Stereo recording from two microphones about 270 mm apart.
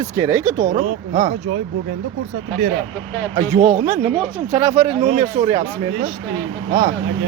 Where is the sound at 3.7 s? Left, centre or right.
Right.